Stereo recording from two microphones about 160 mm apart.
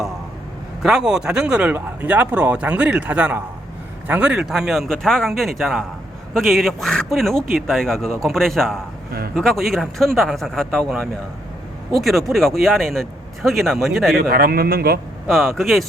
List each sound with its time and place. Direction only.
0.8 s speech: 5° right (ahead or behind)
12.3 s speech: centre (ahead or behind)
14.2 s speech: 65° right (ahead or behind)
15.3 s speech: centre (ahead or behind)